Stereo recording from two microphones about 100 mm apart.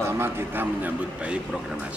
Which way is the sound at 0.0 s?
25° right (ahead or behind).